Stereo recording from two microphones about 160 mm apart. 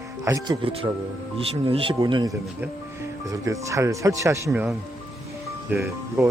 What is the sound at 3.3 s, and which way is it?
Speech, 20° right (ahead or behind).